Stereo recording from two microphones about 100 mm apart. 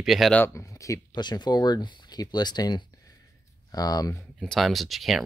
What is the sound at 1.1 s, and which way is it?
Speech, 45° left (ahead or behind).